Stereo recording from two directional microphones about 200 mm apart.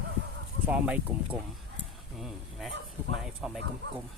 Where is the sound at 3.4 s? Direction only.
5° right (ahead or behind).